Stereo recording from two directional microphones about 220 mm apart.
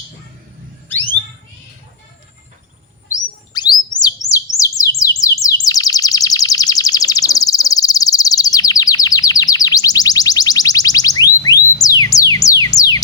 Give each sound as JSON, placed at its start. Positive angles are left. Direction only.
{"t": 3.5, "sound": "bird", "side_deg": 20}